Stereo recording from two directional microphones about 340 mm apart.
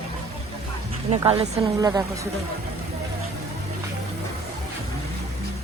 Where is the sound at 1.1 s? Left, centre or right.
Centre.